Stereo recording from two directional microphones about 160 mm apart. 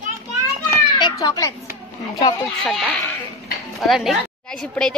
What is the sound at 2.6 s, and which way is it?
A woman's voice, 5° left (ahead or behind).